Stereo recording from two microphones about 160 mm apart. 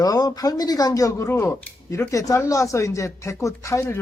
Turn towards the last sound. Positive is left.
turn(degrees=20)  # may be behind; listen again after turning